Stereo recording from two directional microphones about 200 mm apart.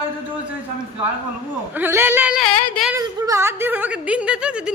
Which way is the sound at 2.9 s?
15° right (ahead or behind).